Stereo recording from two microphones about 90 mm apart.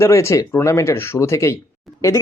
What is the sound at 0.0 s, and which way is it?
Speech, 30° left (ahead or behind).